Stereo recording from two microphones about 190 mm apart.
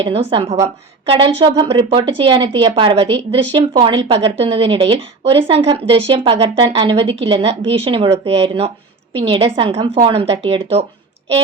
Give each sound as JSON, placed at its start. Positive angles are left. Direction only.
{"t": 0.0, "sound": "a woman's voice", "side_deg": -30}